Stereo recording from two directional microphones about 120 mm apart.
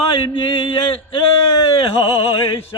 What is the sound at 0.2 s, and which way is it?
Speech, 45° left (ahead or behind).